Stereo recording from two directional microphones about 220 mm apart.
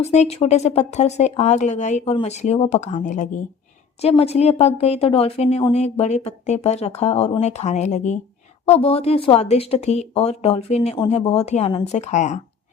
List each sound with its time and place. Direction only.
0.0 s speech: 30° left (ahead or behind)